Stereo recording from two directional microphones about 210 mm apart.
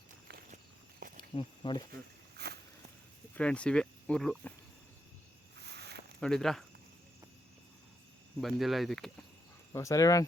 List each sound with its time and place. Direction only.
0.3 s walk: 45° right (ahead or behind)
1.3 s speech: 25° left (ahead or behind)
2.4 s walk: 50° right (ahead or behind)
3.3 s speech: 5° left (ahead or behind)
5.5 s a sound: 50° right (ahead or behind)
6.1 s speech: 5° left (ahead or behind)
8.4 s speech: centre (ahead or behind)
9.7 s speech: 15° left (ahead or behind)